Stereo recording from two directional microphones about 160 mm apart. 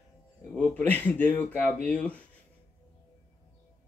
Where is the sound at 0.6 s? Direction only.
10° left (ahead or behind).